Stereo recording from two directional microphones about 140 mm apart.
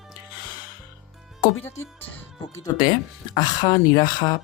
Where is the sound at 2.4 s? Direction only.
30° left (ahead or behind).